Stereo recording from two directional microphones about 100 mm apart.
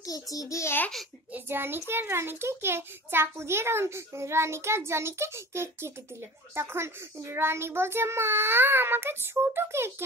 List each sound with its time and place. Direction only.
0.0 s a child's voice: 35° left (ahead or behind)
1.3 s a child's voice: 20° right (ahead or behind)